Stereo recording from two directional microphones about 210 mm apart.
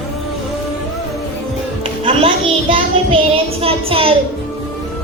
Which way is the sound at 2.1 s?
25° right (ahead or behind).